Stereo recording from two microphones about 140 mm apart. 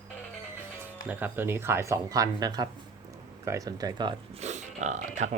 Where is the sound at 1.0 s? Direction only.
10° right (ahead or behind); by 4.1 s 30° right (ahead or behind).